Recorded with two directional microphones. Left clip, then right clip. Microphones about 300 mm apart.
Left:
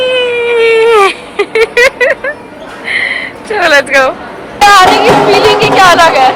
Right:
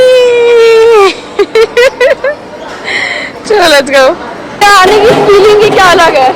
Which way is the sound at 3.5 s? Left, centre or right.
Centre.